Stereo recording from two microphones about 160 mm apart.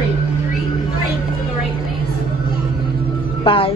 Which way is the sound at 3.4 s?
35° left (ahead or behind).